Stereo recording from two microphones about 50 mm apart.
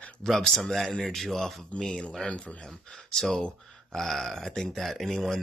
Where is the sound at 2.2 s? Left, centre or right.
Left.